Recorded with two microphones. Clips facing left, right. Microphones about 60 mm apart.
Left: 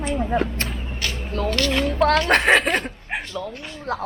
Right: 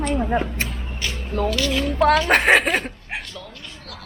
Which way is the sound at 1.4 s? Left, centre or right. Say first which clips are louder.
Left 1 dB; centre.